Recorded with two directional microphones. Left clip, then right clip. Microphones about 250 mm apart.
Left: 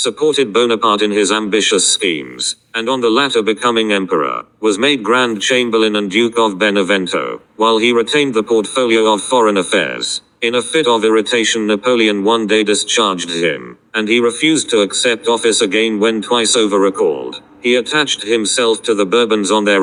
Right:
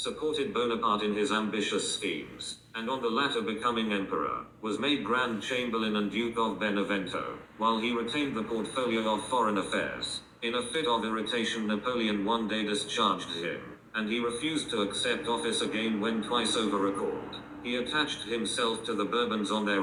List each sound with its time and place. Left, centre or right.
0.0 s a man's voice: left